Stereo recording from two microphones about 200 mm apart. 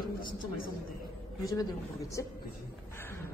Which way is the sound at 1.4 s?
15° left (ahead or behind).